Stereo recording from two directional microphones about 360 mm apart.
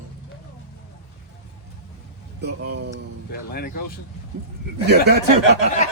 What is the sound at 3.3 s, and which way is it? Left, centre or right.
Speech, left.